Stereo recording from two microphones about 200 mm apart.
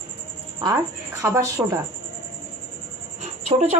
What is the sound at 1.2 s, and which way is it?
Speech, 15° right (ahead or behind).